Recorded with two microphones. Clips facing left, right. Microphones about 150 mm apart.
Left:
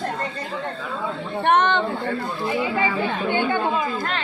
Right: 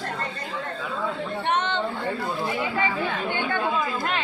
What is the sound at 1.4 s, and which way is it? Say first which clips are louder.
Speech: left 8 dB; 60° left (ahead or behind).